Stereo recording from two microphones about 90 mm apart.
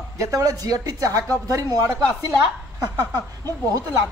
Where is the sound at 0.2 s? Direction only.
40° right (ahead or behind).